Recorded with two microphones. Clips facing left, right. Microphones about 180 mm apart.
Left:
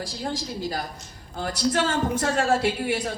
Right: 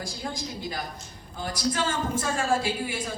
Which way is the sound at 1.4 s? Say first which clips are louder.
Left 4 dB; 65° left (ahead or behind).